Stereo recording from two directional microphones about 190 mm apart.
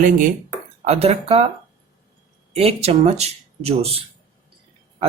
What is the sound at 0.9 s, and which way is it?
Speech, 30° right (ahead or behind).